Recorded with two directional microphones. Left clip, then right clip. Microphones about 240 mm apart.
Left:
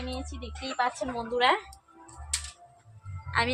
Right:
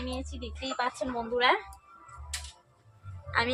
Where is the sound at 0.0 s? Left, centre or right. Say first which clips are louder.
Even; centre.